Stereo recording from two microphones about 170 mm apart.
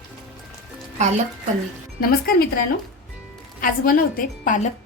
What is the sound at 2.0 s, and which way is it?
Speech, 60° left (ahead or behind).